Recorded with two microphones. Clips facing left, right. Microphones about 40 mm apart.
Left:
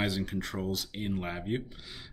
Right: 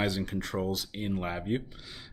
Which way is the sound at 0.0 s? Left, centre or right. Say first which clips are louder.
Right 1 dB; centre.